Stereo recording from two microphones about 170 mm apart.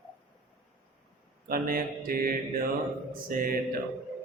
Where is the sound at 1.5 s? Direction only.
60° right (ahead or behind).